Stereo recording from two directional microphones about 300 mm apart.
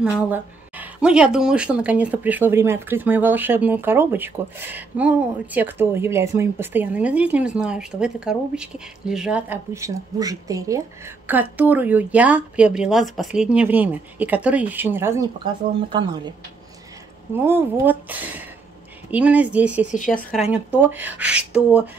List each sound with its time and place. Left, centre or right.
0.0 s speech: centre
17.5 s speech: centre
19.9 s speech: left
20.5 s speech: centre